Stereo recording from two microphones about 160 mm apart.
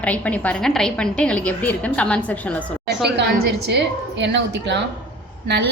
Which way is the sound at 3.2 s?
90° right.